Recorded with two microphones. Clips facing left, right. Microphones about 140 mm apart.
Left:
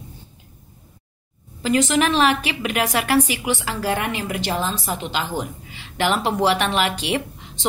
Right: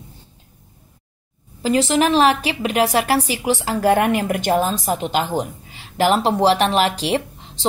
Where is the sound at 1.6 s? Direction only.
35° right (ahead or behind).